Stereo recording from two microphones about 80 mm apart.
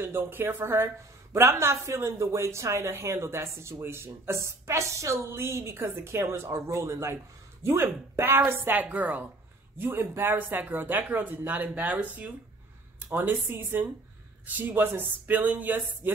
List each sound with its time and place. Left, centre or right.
0.0 s speech: right